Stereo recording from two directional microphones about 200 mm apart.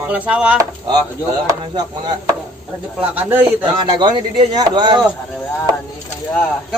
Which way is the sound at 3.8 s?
20° right (ahead or behind).